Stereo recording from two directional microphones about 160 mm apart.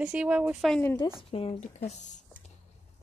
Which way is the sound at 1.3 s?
35° left (ahead or behind).